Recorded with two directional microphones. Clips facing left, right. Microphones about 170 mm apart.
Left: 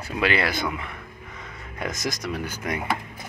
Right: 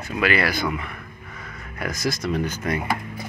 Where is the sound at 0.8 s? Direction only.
20° left (ahead or behind).